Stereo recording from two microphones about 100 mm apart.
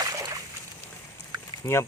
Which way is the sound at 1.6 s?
30° left (ahead or behind).